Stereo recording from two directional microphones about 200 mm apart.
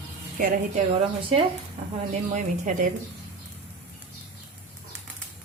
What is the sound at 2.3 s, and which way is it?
Speech, 40° right (ahead or behind).